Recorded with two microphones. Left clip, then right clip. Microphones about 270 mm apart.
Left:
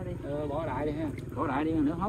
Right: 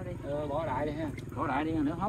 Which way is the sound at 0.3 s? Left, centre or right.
Centre.